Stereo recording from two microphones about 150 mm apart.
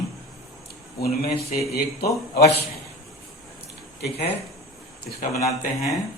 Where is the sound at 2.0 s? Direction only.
90° left.